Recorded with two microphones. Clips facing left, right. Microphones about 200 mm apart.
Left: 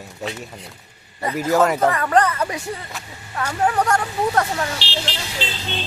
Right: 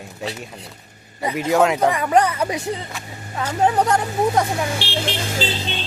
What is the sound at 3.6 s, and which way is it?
Speech, 20° right (ahead or behind).